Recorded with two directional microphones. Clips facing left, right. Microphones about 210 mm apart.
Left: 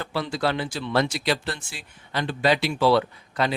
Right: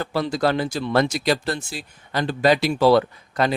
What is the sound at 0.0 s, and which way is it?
Speech, 40° right (ahead or behind).